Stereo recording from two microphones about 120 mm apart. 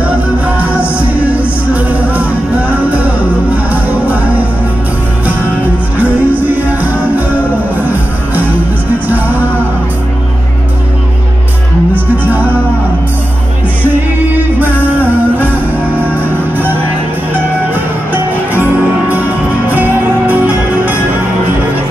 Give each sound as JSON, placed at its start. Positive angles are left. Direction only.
{"t": 0.6, "sound": "music", "side_deg": -10}
{"t": 3.7, "sound": "music", "side_deg": -15}
{"t": 5.9, "sound": "music", "side_deg": -15}
{"t": 9.1, "sound": "music", "side_deg": -15}
{"t": 18.1, "sound": "music", "side_deg": -15}